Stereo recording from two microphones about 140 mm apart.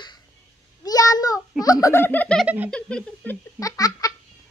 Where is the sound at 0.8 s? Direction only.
25° left (ahead or behind).